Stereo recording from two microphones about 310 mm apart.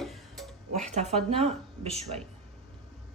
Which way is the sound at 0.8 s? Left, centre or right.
Right.